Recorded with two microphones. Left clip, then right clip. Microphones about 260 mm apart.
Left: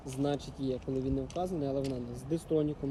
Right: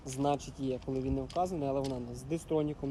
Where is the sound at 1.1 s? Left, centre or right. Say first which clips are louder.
Right 4 dB; right.